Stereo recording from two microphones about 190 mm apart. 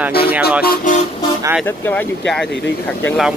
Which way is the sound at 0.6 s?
40° left (ahead or behind).